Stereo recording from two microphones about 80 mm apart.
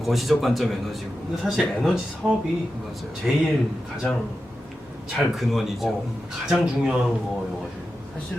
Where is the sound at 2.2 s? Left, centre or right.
Centre.